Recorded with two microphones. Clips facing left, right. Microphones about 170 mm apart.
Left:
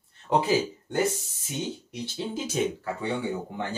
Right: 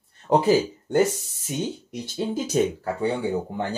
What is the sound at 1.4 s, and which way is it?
Speech, 45° right (ahead or behind).